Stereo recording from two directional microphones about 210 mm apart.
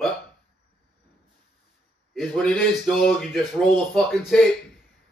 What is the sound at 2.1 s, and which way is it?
Speech, 5° left (ahead or behind).